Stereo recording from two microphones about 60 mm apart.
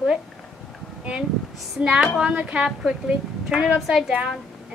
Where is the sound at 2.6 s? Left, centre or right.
Centre.